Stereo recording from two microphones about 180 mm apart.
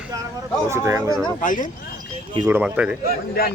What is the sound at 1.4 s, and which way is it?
Speech, 45° left (ahead or behind).